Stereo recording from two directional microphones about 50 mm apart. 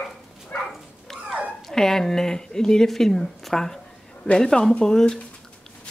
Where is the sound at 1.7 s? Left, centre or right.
Centre.